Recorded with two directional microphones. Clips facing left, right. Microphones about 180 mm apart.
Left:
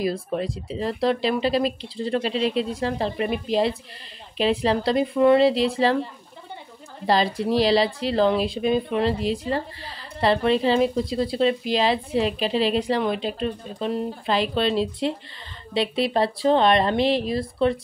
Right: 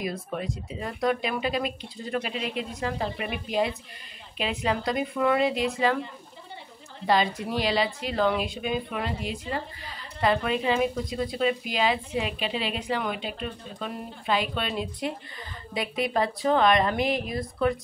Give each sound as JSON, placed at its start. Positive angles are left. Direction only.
{"t": 0.0, "sound": "speech", "side_deg": 30}
{"t": 7.1, "sound": "speech", "side_deg": 35}